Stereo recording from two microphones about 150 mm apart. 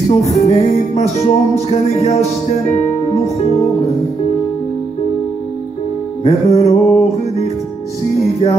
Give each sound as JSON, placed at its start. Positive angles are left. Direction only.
{"t": 0.2, "sound": "music", "side_deg": 50}
{"t": 6.2, "sound": "music", "side_deg": 45}